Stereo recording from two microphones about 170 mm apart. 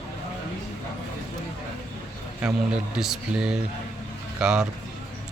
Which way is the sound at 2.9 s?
5° right (ahead or behind).